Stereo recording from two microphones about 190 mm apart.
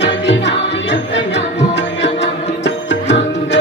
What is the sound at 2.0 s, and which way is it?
Music, 70° left (ahead or behind).